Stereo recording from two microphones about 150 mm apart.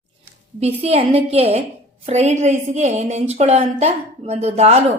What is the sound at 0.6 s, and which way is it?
A woman's voice, 45° right (ahead or behind).